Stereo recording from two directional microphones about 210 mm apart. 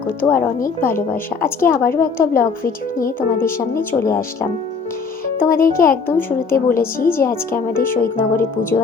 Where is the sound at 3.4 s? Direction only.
10° left (ahead or behind).